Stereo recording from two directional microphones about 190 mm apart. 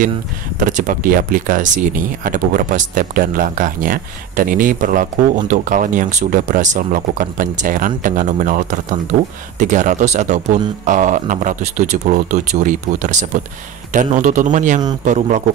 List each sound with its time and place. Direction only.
0.6 s speech: 45° right (ahead or behind)